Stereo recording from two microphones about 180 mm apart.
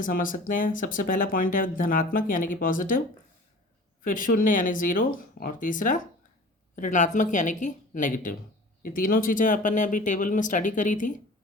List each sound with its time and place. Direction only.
0.0 s speech: 50° left (ahead or behind)
4.0 s speech: 50° left (ahead or behind)